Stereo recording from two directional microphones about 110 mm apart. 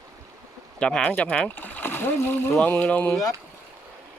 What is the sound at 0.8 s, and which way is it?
Speech, 10° left (ahead or behind).